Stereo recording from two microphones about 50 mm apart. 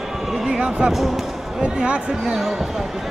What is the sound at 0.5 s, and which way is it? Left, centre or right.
Basketball bounce, centre.